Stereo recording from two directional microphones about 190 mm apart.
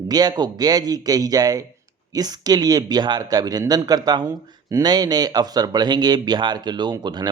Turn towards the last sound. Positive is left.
turn(degrees=-20)  # may be behind; listen again after turning